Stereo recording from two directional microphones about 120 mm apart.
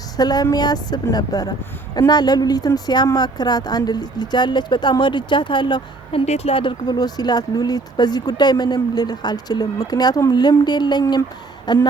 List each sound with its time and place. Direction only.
0.2 s a woman's voice: 35° left (ahead or behind)